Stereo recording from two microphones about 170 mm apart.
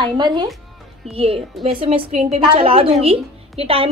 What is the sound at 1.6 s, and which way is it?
A woman's voice, 35° right (ahead or behind).